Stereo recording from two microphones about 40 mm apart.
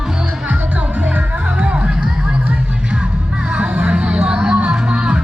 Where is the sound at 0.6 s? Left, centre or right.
Right.